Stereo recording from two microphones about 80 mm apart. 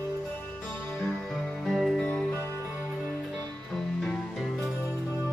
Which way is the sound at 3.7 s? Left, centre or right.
Centre.